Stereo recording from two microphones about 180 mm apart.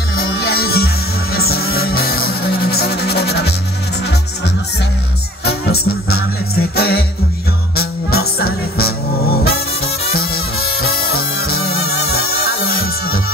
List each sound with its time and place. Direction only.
0.2 s music: 60° left (ahead or behind)
5.4 s music: 60° left (ahead or behind)
10.1 s music: 55° left (ahead or behind)